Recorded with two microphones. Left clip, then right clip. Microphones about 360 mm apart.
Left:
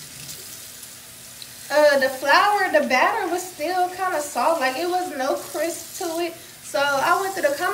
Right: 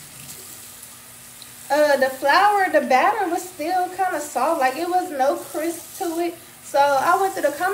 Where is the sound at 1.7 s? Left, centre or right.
Centre.